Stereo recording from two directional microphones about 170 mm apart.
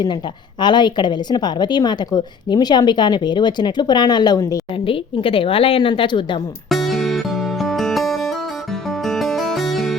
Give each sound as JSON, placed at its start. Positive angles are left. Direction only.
{"t": 0.6, "sound": "a woman's voice", "side_deg": 25}
{"t": 4.9, "sound": "a woman's voice", "side_deg": 30}
{"t": 6.7, "sound": "music", "side_deg": 0}